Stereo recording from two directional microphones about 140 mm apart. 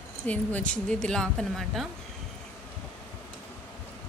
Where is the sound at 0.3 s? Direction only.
10° left (ahead or behind).